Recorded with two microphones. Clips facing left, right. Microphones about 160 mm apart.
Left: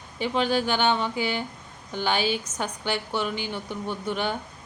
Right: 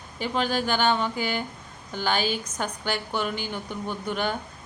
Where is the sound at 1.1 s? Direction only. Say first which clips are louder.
Left 1 dB; 45° right (ahead or behind).